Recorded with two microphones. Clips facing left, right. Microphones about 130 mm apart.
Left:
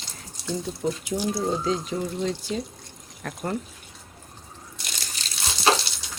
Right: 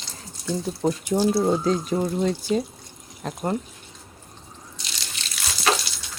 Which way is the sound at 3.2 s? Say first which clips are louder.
Right 3 dB; 20° right (ahead or behind).